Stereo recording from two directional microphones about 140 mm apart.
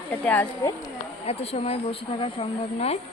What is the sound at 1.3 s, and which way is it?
Speech, 45° left (ahead or behind).